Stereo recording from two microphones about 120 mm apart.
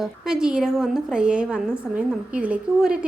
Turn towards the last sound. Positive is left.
turn(degrees=-10)  # may be behind; listen again after turning